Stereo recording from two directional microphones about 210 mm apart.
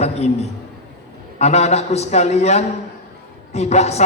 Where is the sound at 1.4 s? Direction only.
30° left (ahead or behind).